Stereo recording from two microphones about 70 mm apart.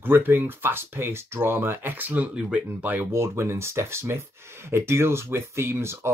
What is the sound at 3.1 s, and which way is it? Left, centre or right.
Speech, right.